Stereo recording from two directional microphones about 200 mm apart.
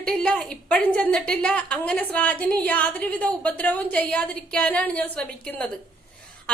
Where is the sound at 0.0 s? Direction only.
5° left (ahead or behind).